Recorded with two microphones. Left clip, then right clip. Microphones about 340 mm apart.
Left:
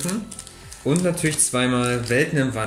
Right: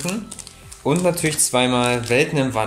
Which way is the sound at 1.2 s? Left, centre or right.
Centre.